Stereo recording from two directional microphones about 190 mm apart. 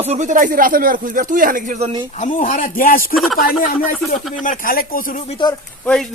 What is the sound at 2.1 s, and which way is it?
Speech, 40° left (ahead or behind).